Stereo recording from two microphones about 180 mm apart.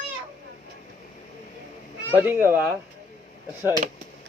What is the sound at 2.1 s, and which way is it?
Speech, 10° right (ahead or behind).